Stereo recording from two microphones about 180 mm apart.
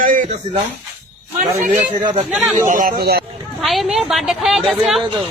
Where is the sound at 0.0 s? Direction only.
50° right (ahead or behind).